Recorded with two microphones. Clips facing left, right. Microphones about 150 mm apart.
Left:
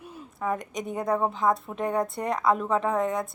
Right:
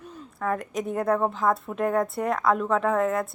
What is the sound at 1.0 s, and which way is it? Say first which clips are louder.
Speech: right 1 dB; 10° left (ahead or behind).